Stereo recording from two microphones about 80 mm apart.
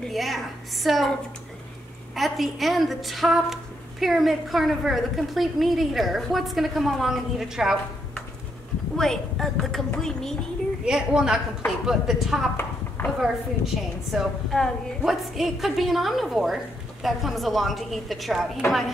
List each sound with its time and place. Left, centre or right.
0.0 s a woman's voice: centre
2.1 s a woman's voice: centre
8.9 s a woman's voice: centre
10.9 s a woman's voice: centre
13.0 s a woman's voice: left
14.1 s a woman's voice: centre